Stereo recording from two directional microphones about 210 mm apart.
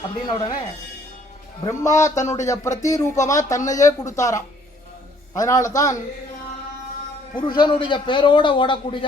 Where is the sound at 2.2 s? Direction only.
15° left (ahead or behind).